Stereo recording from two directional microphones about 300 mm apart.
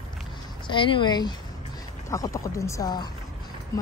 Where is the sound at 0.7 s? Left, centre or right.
Centre.